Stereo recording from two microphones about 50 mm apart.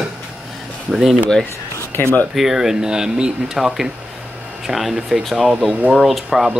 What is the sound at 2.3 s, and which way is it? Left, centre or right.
Speech, centre.